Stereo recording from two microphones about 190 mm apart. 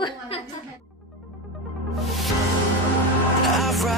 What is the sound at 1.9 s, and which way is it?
Music, centre (ahead or behind).